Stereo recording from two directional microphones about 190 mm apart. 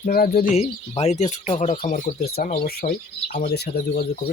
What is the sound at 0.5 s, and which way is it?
Speech, 35° left (ahead or behind).